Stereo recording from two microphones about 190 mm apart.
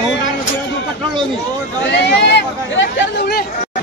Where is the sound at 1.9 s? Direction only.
65° left (ahead or behind).